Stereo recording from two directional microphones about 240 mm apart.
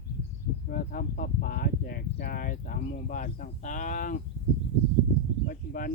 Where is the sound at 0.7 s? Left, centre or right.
Left.